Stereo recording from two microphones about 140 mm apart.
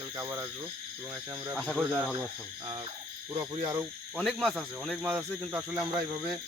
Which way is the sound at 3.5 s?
25° right (ahead or behind).